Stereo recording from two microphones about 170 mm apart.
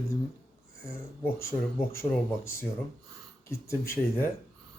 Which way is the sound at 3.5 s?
15° left (ahead or behind).